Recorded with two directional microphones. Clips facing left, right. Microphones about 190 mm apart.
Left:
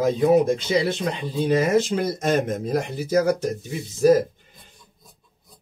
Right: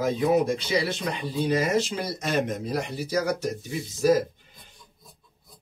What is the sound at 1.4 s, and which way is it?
Speech, 50° left (ahead or behind).